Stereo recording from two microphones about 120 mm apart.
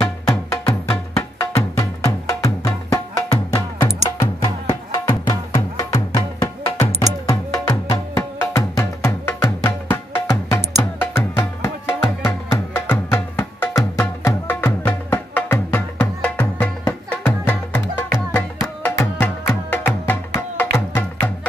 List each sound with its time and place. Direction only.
0.0 s music: 25° left (ahead or behind)